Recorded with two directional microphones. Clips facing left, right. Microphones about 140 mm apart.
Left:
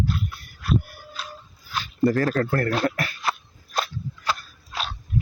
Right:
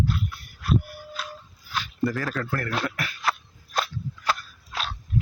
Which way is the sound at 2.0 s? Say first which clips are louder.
Left 7 dB; 40° left (ahead or behind).